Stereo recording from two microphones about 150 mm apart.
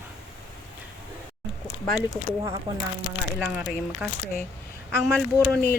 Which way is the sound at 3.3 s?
5° right (ahead or behind).